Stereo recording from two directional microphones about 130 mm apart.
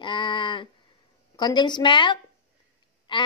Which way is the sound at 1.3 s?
35° left (ahead or behind).